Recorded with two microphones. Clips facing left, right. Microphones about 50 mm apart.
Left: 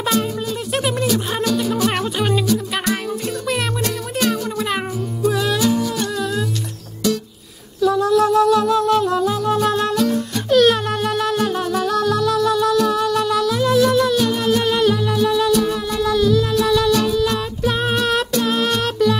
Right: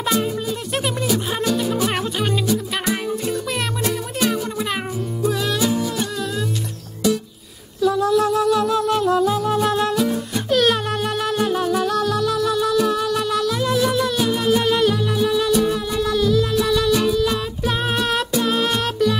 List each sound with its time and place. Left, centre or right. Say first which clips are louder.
0.8 s music: left 2 dB; centre
2.4 s music: left 2 dB; centre
5.6 s humming: left 2 dB; centre
7.8 s music: left 2 dB; centre